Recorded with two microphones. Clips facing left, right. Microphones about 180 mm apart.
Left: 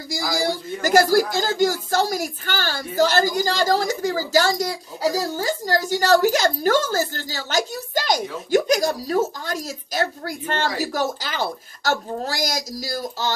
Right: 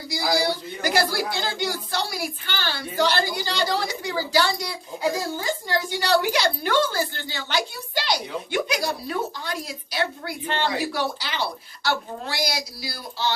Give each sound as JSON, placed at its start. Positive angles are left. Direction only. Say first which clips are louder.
{"t": 0.1, "sound": "speech", "louder": "even", "side_deg": 45}